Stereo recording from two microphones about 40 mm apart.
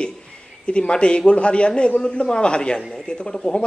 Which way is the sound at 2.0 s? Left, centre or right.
Centre.